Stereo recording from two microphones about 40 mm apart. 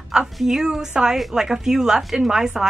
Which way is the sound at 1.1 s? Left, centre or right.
Centre.